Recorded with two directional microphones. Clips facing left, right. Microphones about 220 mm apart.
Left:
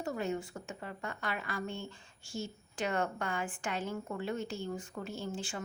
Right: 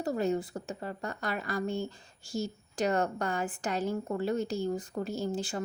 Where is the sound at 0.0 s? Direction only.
35° right (ahead or behind).